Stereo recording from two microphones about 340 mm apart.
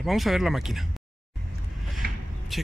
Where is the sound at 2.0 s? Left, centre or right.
Right.